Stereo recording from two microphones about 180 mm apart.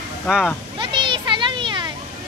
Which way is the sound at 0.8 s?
25° right (ahead or behind).